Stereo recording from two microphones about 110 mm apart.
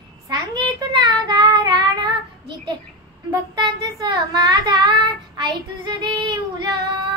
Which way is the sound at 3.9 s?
40° right (ahead or behind).